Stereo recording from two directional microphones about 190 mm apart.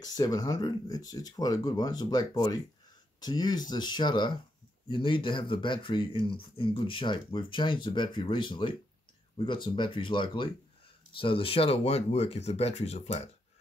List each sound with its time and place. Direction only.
0.0 s speech: 20° left (ahead or behind)